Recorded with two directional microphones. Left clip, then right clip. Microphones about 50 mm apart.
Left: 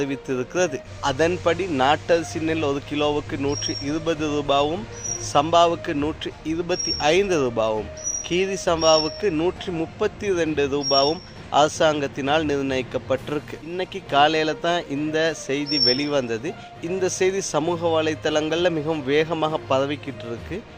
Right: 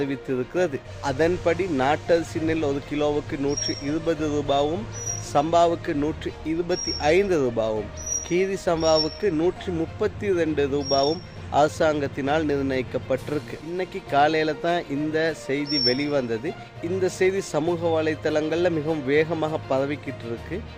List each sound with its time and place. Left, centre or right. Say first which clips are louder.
0.0 s a man's voice: left 1 dB; right